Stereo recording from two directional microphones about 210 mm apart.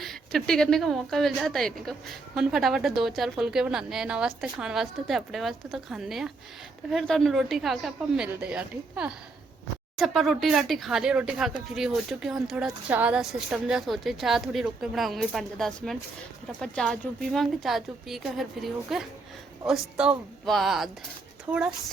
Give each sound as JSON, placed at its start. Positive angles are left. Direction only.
{"t": 0.0, "sound": "a woman's voice", "side_deg": 0}